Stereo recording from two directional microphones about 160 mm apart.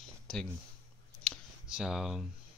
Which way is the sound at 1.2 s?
5° right (ahead or behind).